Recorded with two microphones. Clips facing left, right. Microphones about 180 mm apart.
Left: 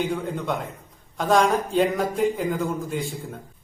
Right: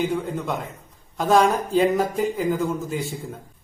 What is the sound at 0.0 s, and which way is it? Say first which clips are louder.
Speech: right 2 dB; centre (ahead or behind).